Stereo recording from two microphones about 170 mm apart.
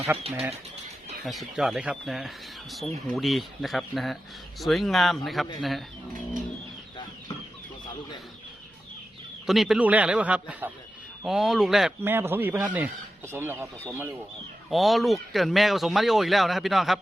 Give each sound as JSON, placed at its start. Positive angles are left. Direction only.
{"t": 0.2, "sound": "speech", "side_deg": -35}
{"t": 1.2, "sound": "speech", "side_deg": 0}
{"t": 9.5, "sound": "speech", "side_deg": 0}
{"t": 14.7, "sound": "speech", "side_deg": 0}